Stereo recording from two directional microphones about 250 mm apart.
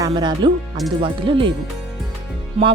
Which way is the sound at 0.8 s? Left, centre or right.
Centre.